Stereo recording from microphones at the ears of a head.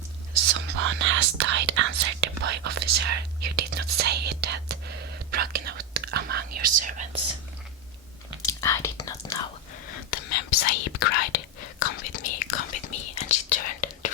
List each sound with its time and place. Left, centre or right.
0.3 s whispering: right
8.4 s whispering: left